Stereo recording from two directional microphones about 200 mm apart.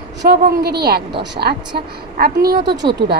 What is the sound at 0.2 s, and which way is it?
Speech, 55° right (ahead or behind).